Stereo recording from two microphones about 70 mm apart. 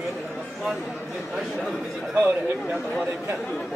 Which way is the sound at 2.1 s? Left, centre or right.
Centre.